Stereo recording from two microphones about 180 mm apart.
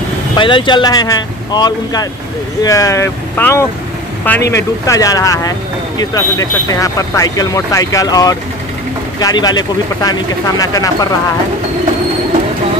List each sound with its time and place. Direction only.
0.4 s speech: 25° left (ahead or behind)